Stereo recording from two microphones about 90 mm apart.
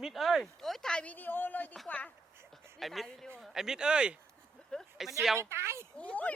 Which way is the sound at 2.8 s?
Centre (ahead or behind).